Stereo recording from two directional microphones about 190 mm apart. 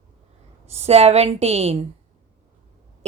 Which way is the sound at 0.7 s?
35° right (ahead or behind).